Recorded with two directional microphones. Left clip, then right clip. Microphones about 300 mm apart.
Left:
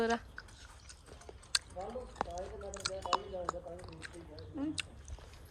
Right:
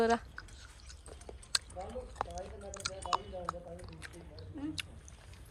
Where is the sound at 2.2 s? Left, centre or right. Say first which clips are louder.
Left 1 dB; centre.